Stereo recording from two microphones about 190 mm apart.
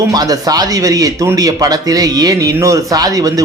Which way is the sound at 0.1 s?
20° right (ahead or behind).